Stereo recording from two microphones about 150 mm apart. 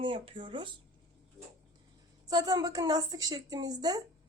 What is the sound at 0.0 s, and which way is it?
Speech, 35° right (ahead or behind).